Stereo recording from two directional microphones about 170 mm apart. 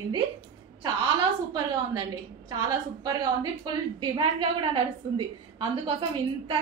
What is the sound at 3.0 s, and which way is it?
A woman's voice, 25° right (ahead or behind).